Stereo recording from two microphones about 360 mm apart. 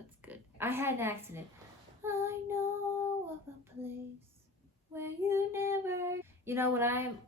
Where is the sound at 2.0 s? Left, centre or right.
Centre.